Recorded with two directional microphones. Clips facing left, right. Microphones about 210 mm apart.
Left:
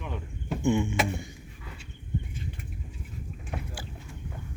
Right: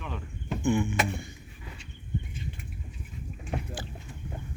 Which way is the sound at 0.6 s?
25° left (ahead or behind).